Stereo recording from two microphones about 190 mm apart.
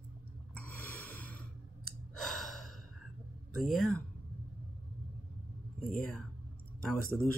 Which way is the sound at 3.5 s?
Centre (ahead or behind).